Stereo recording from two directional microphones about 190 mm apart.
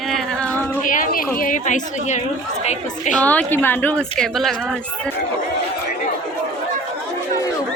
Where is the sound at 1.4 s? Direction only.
45° left (ahead or behind).